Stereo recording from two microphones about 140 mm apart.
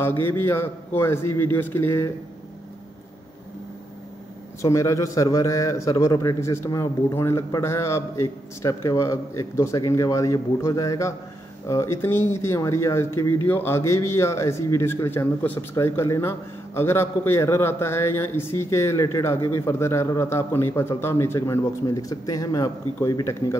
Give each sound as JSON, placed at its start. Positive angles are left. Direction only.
{"t": 0.0, "sound": "a man's voice", "side_deg": 15}
{"t": 4.6, "sound": "a man's voice", "side_deg": 20}